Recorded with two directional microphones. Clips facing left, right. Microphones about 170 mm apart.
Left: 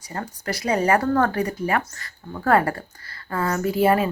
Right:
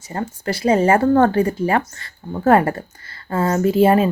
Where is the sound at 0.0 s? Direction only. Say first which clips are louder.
Right 6 dB; 25° right (ahead or behind).